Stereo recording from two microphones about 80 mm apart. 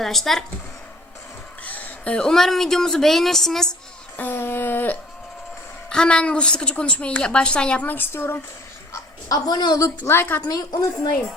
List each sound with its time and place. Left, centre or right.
0.0 s speech: centre
1.6 s speech: centre
4.2 s a sound: left
5.9 s speech: centre; by 8.4 s left
8.9 s a sound: left
10.0 s a woman's voice: left
10.5 s a woman's voice: left